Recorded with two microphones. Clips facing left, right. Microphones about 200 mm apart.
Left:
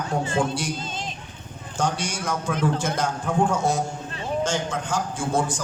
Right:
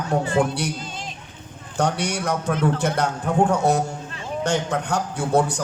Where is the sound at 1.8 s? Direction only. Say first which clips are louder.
Right 3 dB; 65° right (ahead or behind).